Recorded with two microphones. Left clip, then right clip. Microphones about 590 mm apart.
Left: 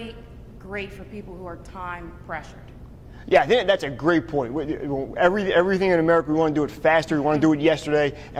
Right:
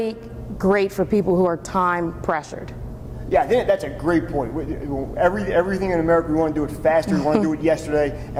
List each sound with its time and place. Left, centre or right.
0.6 s a woman's voice: right
3.2 s a man's voice: left